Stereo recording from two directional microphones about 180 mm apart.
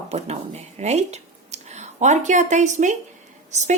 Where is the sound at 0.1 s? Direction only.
35° right (ahead or behind).